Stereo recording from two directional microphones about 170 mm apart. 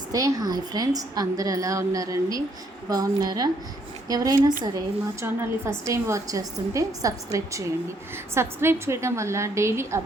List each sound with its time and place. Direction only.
0.1 s a woman's voice: 20° right (ahead or behind)